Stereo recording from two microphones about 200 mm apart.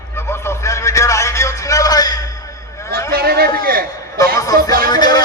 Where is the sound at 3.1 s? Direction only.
50° right (ahead or behind).